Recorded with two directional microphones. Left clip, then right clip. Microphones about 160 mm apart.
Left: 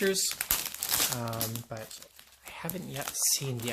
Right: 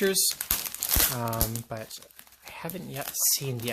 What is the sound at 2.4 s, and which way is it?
Speech, 20° right (ahead or behind).